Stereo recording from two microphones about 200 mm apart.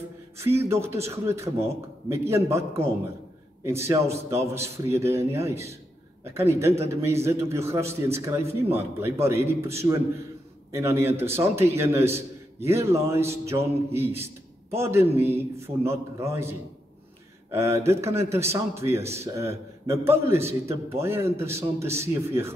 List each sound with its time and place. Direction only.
0.7 s a man's voice: 15° right (ahead or behind)
3.6 s a man's voice: 15° right (ahead or behind)